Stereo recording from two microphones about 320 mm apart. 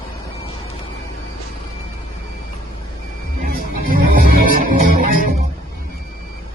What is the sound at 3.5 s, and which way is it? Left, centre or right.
Music, right.